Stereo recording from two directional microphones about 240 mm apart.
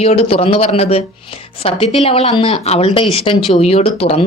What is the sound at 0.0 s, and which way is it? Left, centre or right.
A woman's voice, left.